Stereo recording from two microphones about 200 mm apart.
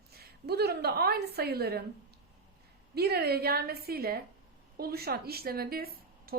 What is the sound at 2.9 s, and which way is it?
A woman's voice, 50° right (ahead or behind).